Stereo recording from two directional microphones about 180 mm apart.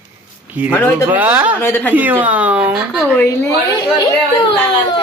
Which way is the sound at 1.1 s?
10° right (ahead or behind).